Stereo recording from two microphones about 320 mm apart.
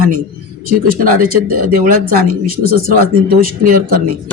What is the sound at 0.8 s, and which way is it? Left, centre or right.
Speech, right.